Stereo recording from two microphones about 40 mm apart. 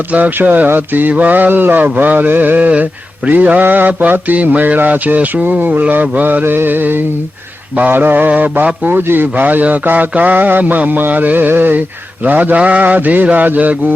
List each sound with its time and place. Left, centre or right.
0.1 s mantra: right
2.6 s mantra: right
6.4 s music: right
6.7 s a man's voice: right
8.3 s mantra: right
8.9 s a man's voice: right
9.3 s mantra: right
12.5 s mantra: right